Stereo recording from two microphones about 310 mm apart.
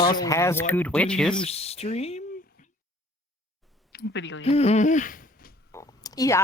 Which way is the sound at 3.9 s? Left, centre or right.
Left.